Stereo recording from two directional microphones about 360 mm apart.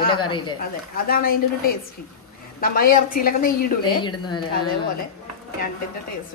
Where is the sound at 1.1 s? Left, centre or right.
Left.